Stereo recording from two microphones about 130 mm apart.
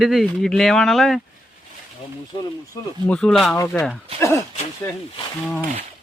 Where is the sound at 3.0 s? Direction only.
5° left (ahead or behind).